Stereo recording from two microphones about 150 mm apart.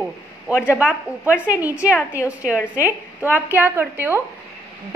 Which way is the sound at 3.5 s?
15° right (ahead or behind).